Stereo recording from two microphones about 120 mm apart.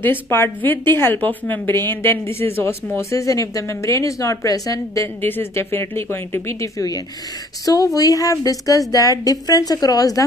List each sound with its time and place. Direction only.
0.0 s a woman's voice: 20° left (ahead or behind)